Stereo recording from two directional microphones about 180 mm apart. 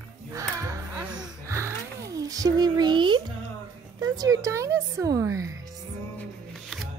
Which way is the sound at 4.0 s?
20° right (ahead or behind).